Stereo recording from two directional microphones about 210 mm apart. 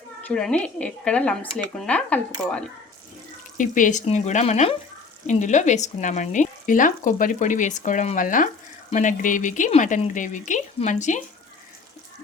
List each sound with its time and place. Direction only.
0.2 s speech: 5° left (ahead or behind)
3.6 s speech: 40° left (ahead or behind)